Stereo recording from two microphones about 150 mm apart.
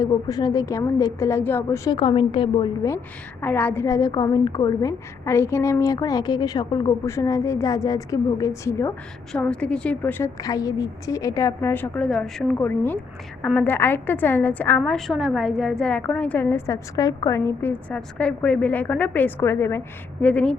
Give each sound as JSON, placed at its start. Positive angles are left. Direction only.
{"t": 0.0, "sound": "a woman's voice", "side_deg": 25}
{"t": 2.0, "sound": "a woman's voice", "side_deg": 35}
{"t": 3.4, "sound": "a woman's voice", "side_deg": 10}
{"t": 9.3, "sound": "a woman's voice", "side_deg": 5}